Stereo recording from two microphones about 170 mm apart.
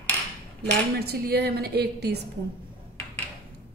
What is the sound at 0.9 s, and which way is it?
A woman's voice, 70° right (ahead or behind).